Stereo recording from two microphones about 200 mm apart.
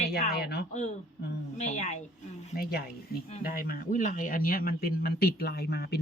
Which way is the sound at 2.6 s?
50° left (ahead or behind).